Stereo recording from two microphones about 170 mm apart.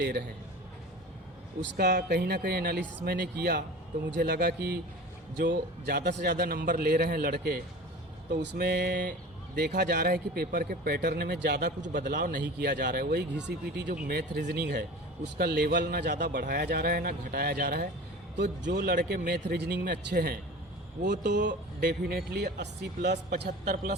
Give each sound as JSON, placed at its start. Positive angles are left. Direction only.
{"t": 0.0, "sound": "a man's voice", "side_deg": -65}
{"t": 1.7, "sound": "a man's voice", "side_deg": -70}
{"t": 8.4, "sound": "speech", "side_deg": -75}
{"t": 9.6, "sound": "speech", "side_deg": -70}
{"t": 11.9, "sound": "a man's voice", "side_deg": -50}
{"t": 13.9, "sound": "a man's voice", "side_deg": -70}
{"t": 18.3, "sound": "speech", "side_deg": -85}
{"t": 18.8, "sound": "a man's voice", "side_deg": -55}
{"t": 19.0, "sound": "a man's voice", "side_deg": -65}
{"t": 21.4, "sound": "speech", "side_deg": -80}
{"t": 23.4, "sound": "a man's voice", "side_deg": -60}